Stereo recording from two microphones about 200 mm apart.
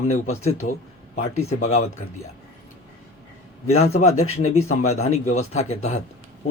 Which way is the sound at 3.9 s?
35° left (ahead or behind).